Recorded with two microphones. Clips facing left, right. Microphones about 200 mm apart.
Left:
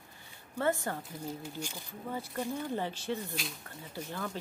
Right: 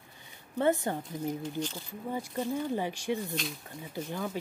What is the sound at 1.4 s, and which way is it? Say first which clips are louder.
Speech: right 6 dB; 10° left (ahead or behind).